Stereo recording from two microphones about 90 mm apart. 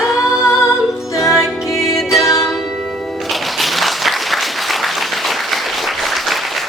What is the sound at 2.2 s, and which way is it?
Music, 35° left (ahead or behind).